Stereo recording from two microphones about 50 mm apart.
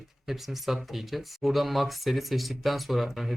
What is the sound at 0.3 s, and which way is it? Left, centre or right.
Speech, centre.